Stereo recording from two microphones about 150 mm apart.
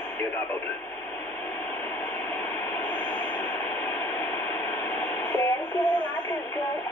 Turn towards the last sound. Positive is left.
turn(degrees=30)  # may be behind; listen again after turning